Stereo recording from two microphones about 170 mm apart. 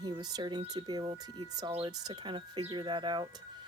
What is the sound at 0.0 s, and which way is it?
Speech, 25° right (ahead or behind).